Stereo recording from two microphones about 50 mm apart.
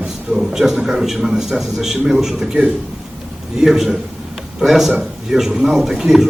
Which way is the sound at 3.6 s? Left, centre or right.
Centre.